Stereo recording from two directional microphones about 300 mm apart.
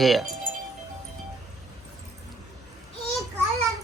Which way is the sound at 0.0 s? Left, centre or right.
Centre.